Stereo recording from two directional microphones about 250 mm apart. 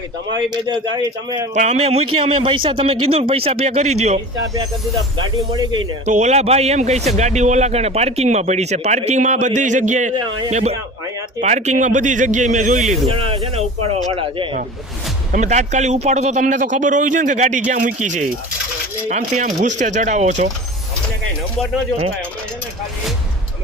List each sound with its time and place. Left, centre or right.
0.3 s a man's voice: centre
1.5 s a man's voice: right
6.1 s a man's voice: right
10.2 s a man's voice: centre
10.5 s a man's voice: right